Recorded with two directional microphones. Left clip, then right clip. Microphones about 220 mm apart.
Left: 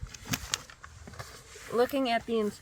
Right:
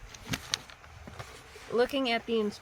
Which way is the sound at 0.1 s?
20° left (ahead or behind).